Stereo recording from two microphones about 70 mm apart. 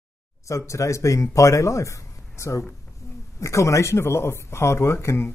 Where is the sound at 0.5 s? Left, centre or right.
Left.